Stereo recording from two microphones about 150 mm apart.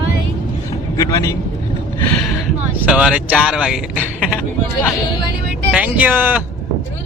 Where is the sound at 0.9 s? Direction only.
20° left (ahead or behind).